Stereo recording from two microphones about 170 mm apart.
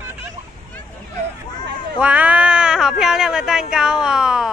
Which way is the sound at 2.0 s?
10° right (ahead or behind).